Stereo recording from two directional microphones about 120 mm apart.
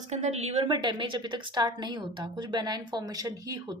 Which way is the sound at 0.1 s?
70° right (ahead or behind).